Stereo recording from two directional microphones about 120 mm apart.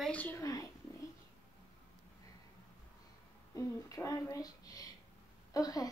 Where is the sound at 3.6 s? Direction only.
30° left (ahead or behind).